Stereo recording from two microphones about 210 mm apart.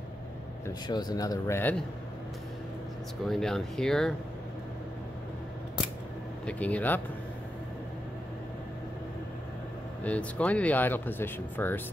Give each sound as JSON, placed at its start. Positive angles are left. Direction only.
{"t": 0.7, "sound": "speech", "side_deg": 20}
{"t": 3.3, "sound": "speech", "side_deg": 0}
{"t": 6.4, "sound": "speech", "side_deg": 5}
{"t": 10.0, "sound": "speech", "side_deg": 5}